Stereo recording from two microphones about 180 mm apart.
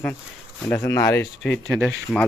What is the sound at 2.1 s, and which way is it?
Speech, 5° left (ahead or behind).